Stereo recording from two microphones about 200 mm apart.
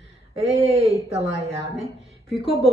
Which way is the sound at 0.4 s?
30° right (ahead or behind).